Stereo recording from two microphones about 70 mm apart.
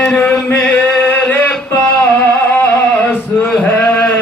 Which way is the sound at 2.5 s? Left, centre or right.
Left.